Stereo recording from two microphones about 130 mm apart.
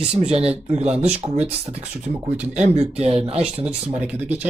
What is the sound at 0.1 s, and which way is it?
Speech, 50° right (ahead or behind).